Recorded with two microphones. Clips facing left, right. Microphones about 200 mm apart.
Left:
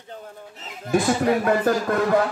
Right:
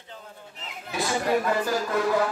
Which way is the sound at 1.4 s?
55° left (ahead or behind).